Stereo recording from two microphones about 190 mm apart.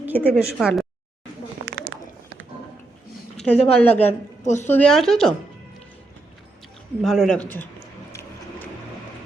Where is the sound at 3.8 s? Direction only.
10° left (ahead or behind).